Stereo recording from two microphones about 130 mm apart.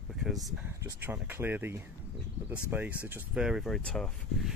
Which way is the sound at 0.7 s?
20° right (ahead or behind).